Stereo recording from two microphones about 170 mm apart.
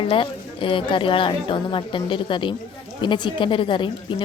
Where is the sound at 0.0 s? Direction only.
30° left (ahead or behind).